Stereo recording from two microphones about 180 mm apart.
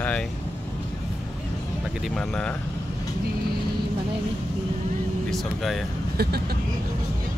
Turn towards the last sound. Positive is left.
turn(degrees=-60)  # may be behind; listen again after turning